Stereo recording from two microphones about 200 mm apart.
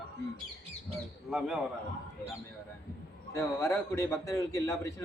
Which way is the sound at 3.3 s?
15° left (ahead or behind).